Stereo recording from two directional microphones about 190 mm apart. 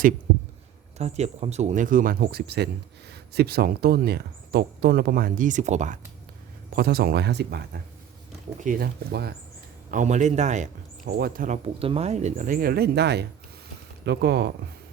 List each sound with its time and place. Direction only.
0.9 s speech: 35° right (ahead or behind)
6.7 s speech: 55° right (ahead or behind)
8.6 s speech: 50° right (ahead or behind)
9.9 s speech: 40° right (ahead or behind); by 14.5 s 60° right (ahead or behind)